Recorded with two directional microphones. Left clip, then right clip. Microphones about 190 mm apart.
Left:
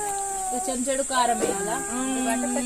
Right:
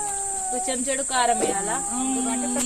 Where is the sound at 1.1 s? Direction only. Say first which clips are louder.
Right 2 dB; 35° left (ahead or behind).